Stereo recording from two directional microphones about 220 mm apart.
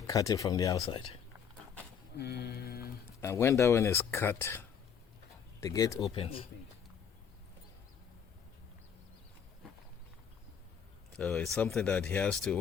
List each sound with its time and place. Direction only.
0.1 s speech: 15° left (ahead or behind)
2.1 s a sound: 45° left (ahead or behind)
3.2 s speech: 10° left (ahead or behind)
6.1 s speech: 25° left (ahead or behind)
11.1 s speech: 5° left (ahead or behind)